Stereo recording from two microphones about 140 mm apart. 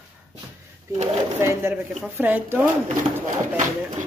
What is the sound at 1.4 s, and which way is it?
A woman's voice, 20° right (ahead or behind).